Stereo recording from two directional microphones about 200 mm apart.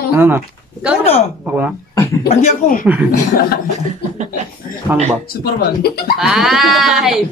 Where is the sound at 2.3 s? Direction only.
35° left (ahead or behind).